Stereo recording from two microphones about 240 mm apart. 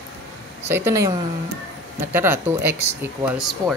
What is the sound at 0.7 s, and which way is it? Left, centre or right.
Speech, centre.